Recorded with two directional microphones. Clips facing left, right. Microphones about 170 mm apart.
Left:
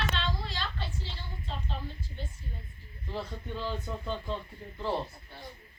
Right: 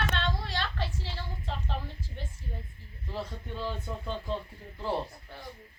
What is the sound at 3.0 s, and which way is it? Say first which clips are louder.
Speech: even; 5° right (ahead or behind).